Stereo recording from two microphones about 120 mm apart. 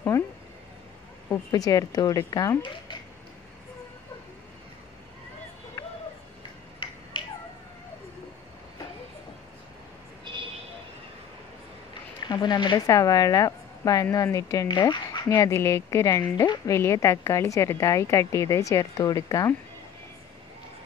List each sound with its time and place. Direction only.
1.5 s a woman's voice: 30° left (ahead or behind)
2.6 s speech: 40° left (ahead or behind)
5.8 s a sound: 25° left (ahead or behind)
7.2 s finger snapping: 45° left (ahead or behind)
10.3 s a sound: 40° right (ahead or behind)
12.3 s speech: 40° left (ahead or behind)
12.7 s speech: 30° left (ahead or behind)